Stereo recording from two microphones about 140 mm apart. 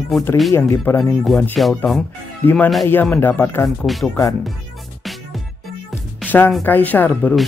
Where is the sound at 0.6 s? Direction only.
20° left (ahead or behind).